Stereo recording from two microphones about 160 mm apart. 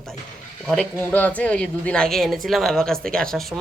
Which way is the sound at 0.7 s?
5° left (ahead or behind).